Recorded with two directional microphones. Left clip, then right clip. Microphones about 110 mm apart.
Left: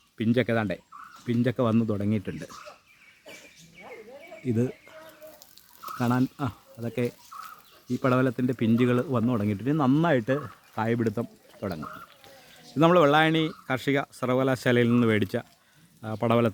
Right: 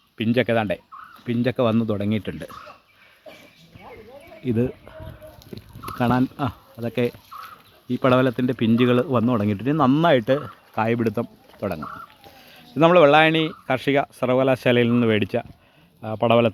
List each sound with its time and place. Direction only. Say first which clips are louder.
0.2 s speech: right 5 dB; centre (ahead or behind)
4.4 s speech: right 5 dB; 15° right (ahead or behind)
5.5 s speech: right 7 dB; 25° right (ahead or behind)
12.7 s speech: right 6 dB; centre (ahead or behind)